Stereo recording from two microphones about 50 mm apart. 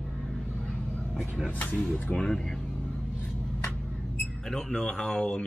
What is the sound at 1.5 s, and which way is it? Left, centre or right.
Speech, left.